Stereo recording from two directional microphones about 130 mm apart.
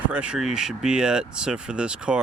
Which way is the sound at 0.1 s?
10° right (ahead or behind).